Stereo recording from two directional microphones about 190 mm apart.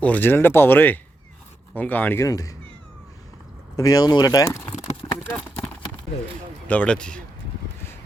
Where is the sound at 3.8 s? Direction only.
20° left (ahead or behind).